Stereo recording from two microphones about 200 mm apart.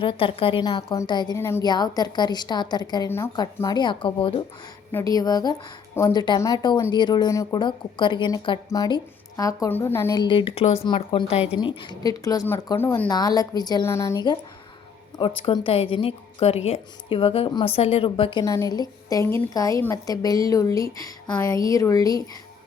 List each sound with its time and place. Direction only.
0.0 s a woman's voice: 25° left (ahead or behind)
4.9 s a woman's voice: 15° left (ahead or behind)
15.4 s a woman's voice: 25° left (ahead or behind)